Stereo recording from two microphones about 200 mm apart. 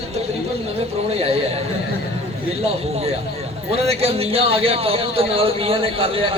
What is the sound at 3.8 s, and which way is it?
Speech, 30° right (ahead or behind).